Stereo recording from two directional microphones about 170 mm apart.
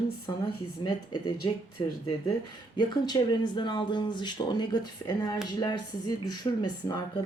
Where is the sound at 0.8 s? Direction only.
25° left (ahead or behind).